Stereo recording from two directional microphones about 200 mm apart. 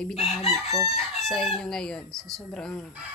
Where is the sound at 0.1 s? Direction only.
30° left (ahead or behind).